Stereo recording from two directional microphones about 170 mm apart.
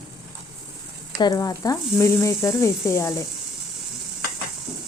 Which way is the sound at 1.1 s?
20° left (ahead or behind).